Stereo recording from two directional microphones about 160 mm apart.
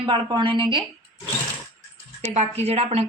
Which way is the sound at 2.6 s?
40° right (ahead or behind).